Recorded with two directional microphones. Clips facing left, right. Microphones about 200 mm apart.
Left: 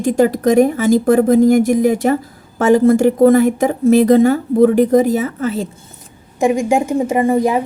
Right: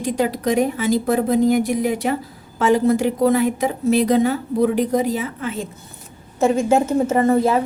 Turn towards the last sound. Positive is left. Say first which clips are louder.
# left 2 dB
turn(degrees=15)  # may be behind; listen again after turning